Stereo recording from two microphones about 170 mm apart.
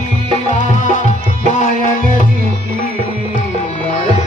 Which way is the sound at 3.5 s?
40° left (ahead or behind).